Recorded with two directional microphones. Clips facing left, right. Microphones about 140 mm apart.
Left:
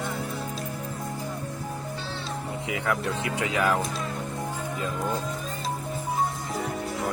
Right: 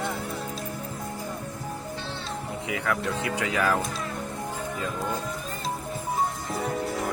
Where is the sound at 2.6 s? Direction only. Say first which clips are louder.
Even; 20° left (ahead or behind).